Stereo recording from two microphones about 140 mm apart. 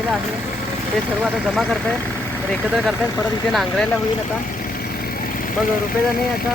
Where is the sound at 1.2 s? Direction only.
Centre (ahead or behind).